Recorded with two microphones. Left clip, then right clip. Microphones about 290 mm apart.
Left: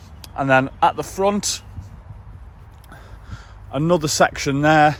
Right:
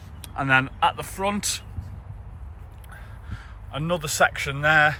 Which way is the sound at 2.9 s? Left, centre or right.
Centre.